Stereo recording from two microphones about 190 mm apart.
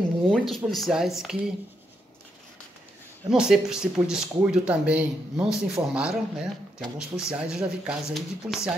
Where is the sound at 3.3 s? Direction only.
5° right (ahead or behind).